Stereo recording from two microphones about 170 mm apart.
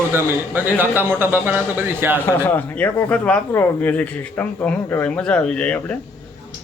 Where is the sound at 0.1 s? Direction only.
10° right (ahead or behind).